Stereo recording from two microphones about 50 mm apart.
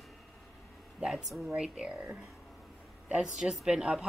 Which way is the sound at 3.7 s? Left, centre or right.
Centre.